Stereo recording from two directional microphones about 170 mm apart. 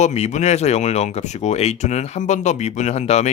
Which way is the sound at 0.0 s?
40° left (ahead or behind).